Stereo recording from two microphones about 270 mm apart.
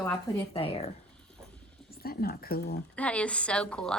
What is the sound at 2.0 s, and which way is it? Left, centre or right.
Speech, left.